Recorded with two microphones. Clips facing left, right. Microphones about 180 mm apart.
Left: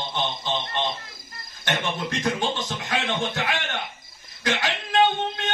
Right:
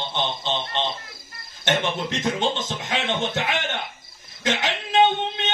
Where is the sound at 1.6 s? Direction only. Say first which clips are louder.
Right 3 dB; 20° right (ahead or behind).